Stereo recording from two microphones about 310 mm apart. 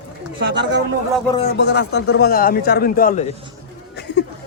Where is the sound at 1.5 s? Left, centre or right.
Left.